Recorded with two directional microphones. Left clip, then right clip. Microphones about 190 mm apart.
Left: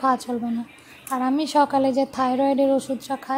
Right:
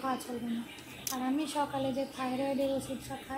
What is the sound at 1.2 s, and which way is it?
A woman's voice, 40° left (ahead or behind).